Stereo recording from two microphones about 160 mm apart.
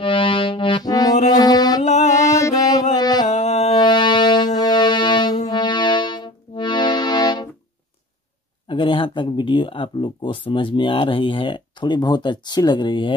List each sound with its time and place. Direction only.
0.0 s music: 30° left (ahead or behind)
1.8 s music: 45° left (ahead or behind)
2.2 s music: 20° left (ahead or behind)
2.9 s a sound: 25° left (ahead or behind)
3.3 s music: 45° left (ahead or behind)
3.7 s music: 25° left (ahead or behind)
8.6 s speech: 35° left (ahead or behind)